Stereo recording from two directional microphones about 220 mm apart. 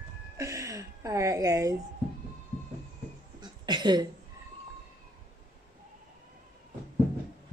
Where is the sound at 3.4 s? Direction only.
20° right (ahead or behind).